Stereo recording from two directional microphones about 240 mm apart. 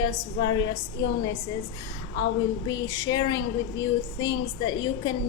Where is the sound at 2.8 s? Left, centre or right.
Centre.